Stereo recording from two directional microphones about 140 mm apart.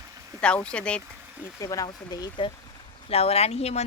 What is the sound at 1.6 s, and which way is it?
Speech, 25° left (ahead or behind).